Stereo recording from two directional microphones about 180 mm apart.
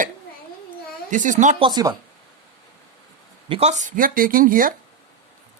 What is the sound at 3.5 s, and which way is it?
Speech, 35° right (ahead or behind).